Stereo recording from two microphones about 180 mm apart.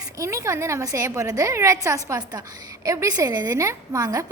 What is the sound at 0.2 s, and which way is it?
A woman's voice, 15° right (ahead or behind).